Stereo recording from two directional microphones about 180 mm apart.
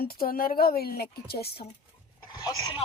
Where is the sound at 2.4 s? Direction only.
25° left (ahead or behind).